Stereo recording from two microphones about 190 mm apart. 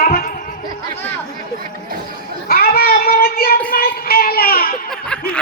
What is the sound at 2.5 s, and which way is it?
Child singing, 55° left (ahead or behind).